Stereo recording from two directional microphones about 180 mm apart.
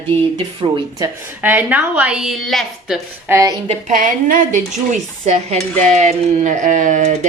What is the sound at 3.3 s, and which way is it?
Speech, 15° right (ahead or behind).